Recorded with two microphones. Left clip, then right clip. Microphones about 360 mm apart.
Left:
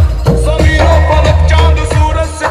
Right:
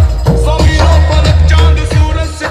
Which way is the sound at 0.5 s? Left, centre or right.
Centre.